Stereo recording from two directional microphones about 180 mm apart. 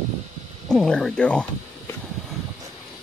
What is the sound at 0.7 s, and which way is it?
Speech, 5° left (ahead or behind).